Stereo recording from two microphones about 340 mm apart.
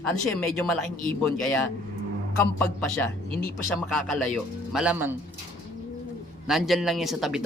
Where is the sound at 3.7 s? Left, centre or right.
Centre.